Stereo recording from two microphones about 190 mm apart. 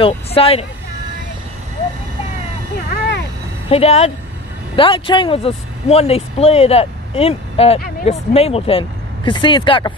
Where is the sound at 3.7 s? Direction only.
35° left (ahead or behind).